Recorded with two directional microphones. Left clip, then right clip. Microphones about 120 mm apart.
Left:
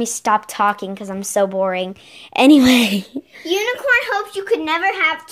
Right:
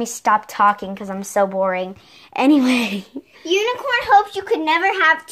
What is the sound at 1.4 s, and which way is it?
Speech, 50° left (ahead or behind).